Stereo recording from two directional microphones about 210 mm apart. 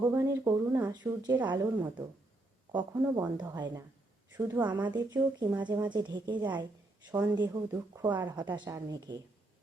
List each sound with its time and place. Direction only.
0.1 s speech: 15° right (ahead or behind)